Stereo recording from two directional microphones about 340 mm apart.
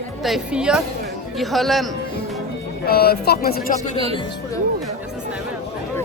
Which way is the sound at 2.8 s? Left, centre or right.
Left.